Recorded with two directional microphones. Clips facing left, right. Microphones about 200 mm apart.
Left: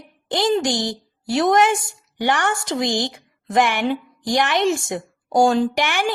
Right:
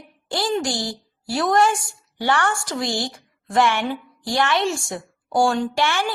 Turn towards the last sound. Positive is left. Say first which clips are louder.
# left 2 dB
turn(degrees=15)  # may be behind; listen again after turning